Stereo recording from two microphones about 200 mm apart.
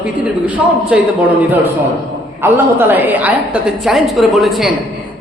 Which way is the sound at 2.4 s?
10° right (ahead or behind).